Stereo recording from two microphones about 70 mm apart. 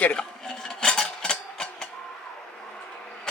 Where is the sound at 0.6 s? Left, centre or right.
Centre.